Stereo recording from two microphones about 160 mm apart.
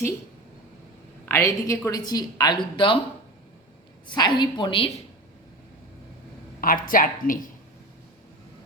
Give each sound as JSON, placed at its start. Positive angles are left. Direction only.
{"t": 1.2, "sound": "a woman's voice", "side_deg": 15}
{"t": 4.1, "sound": "a woman's voice", "side_deg": 25}
{"t": 6.6, "sound": "a woman's voice", "side_deg": 60}